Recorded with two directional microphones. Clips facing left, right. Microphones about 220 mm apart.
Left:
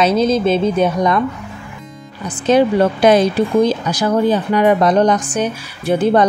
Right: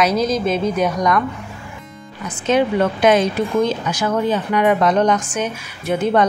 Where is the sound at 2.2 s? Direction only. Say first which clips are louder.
Left 4 dB; 35° left (ahead or behind).